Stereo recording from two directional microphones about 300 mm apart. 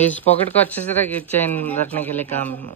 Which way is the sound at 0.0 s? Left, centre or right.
Centre.